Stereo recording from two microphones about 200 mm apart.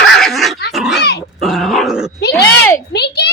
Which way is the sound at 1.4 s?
Centre (ahead or behind).